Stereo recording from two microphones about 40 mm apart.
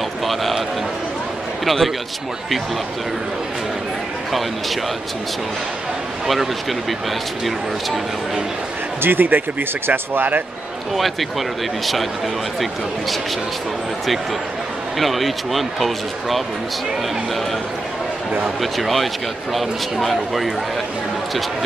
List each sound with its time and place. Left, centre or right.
0.3 s a sound: centre
1.6 s a man's voice: centre
4.3 s speech: centre
6.2 s speech: centre
9.0 s speech: right
11.0 s speech: centre
15.0 s speech: centre
18.6 s speech: centre